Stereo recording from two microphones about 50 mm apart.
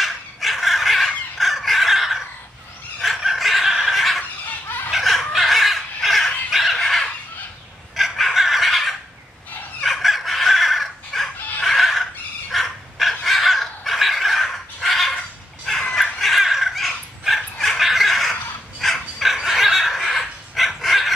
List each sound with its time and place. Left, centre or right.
0.0 s fowl: centre
3.0 s a sound: centre
4.6 s chicken: left
4.9 s chicken: centre
7.9 s fowl: centre
11.6 s a sound: centre
13.2 s crow: centre
15.7 s fowl: centre
16.0 s dog: centre